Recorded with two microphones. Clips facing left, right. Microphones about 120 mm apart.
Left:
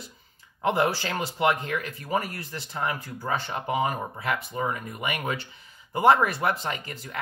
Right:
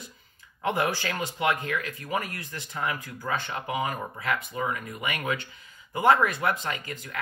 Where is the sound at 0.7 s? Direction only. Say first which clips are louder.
Left 3 dB; 30° left (ahead or behind).